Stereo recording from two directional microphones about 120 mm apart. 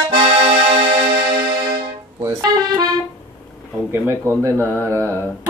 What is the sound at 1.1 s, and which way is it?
Music, 35° right (ahead or behind).